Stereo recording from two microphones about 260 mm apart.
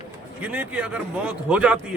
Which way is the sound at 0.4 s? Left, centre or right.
Centre.